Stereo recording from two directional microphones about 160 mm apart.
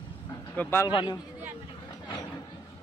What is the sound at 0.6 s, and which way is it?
Speech, 15° left (ahead or behind).